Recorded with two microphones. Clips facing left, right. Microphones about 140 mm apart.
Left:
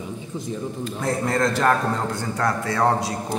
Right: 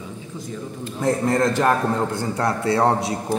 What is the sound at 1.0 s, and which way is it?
A man's voice, 25° right (ahead or behind).